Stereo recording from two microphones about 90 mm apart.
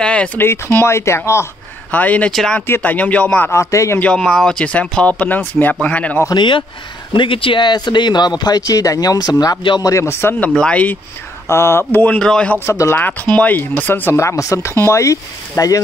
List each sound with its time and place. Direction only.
0.0 s speech: 15° left (ahead or behind)
0.4 s speech: 25° left (ahead or behind)
1.9 s speech: 20° left (ahead or behind)
2.3 s speech: 5° left (ahead or behind)
2.6 s speech: 20° left (ahead or behind)
3.7 s speech: 35° left (ahead or behind)
4.0 s speech: 10° left (ahead or behind)
6.3 s speech: 65° left (ahead or behind)
7.2 s speech: 75° left (ahead or behind); by 10.3 s 30° left (ahead or behind)
10.4 s speech: 10° left (ahead or behind)
11.4 s speech: 30° left (ahead or behind)
11.9 s speech: 20° left (ahead or behind)
12.5 s speech: 30° left (ahead or behind)
13.4 s speech: 20° left (ahead or behind); by 15.8 s 35° left (ahead or behind)